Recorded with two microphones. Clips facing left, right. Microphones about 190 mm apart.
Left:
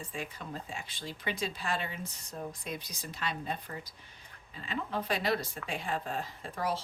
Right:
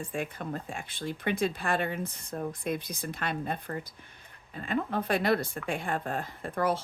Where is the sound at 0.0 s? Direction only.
55° right (ahead or behind).